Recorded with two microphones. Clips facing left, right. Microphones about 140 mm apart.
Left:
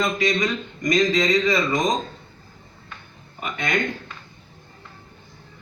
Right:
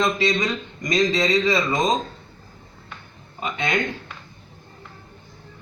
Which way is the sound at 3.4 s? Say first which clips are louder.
Right 1 dB; 25° right (ahead or behind).